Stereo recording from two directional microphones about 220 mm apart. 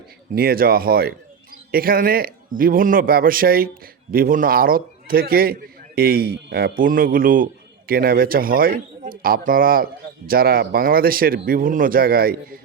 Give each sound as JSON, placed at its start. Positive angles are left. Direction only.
{"t": 0.3, "sound": "a man's voice", "side_deg": -45}